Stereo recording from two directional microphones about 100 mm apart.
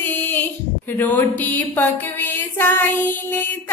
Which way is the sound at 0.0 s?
20° left (ahead or behind).